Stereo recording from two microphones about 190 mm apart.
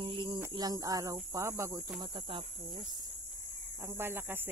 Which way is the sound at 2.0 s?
25° right (ahead or behind).